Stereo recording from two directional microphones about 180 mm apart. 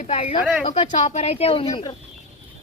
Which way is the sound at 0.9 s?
35° left (ahead or behind).